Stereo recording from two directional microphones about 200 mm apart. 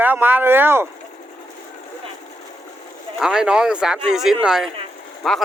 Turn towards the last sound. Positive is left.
turn(degrees=5)  # may be behind; listen again after turning